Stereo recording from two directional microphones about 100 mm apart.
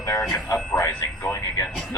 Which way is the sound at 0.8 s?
35° left (ahead or behind).